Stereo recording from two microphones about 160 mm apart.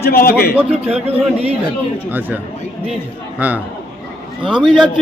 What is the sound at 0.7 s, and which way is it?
Speech, 40° right (ahead or behind).